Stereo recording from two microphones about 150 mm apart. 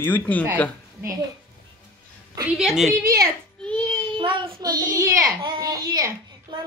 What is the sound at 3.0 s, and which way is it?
Speech, 90° right.